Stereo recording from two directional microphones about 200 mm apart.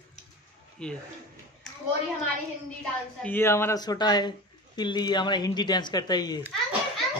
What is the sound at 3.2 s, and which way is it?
Speech, 10° left (ahead or behind).